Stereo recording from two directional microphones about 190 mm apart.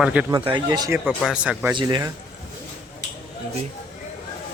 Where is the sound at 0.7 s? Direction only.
20° right (ahead or behind).